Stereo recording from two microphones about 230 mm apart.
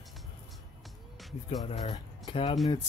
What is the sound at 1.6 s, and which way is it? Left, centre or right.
Speech, left.